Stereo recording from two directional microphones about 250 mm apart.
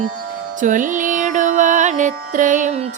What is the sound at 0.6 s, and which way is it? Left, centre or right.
Music, right.